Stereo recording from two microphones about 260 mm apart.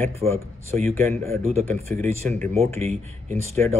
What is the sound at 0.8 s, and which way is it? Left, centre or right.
Speech, centre.